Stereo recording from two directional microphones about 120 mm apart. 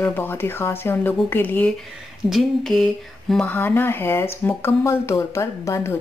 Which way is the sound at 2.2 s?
Centre (ahead or behind).